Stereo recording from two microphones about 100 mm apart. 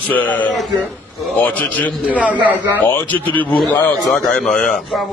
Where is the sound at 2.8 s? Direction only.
15° left (ahead or behind).